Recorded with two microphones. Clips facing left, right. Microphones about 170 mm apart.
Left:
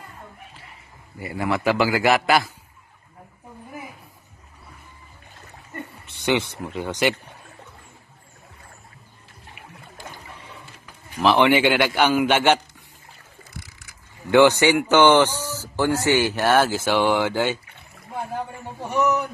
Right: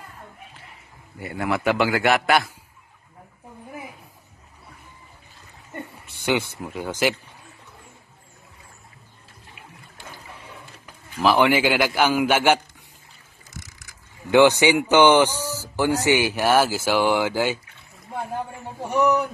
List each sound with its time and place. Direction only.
1.2 s a man's voice: centre (ahead or behind)
6.0 s a sound: 5° right (ahead or behind)
6.6 s a man's voice: 5° right (ahead or behind)
11.2 s a man's voice: 5° right (ahead or behind)
13.4 s boat: 45° right (ahead or behind)
14.3 s speech: 15° right (ahead or behind)